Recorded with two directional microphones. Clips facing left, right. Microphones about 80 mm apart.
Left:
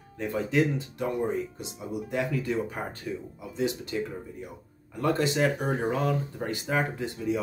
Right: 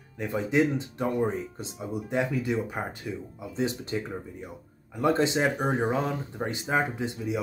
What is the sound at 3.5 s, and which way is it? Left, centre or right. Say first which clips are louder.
Speech: even; right.